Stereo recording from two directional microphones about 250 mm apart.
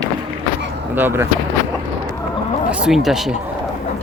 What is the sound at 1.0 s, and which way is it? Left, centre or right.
Speech, centre.